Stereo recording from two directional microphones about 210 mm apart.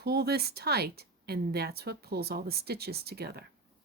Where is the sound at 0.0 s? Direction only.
50° right (ahead or behind).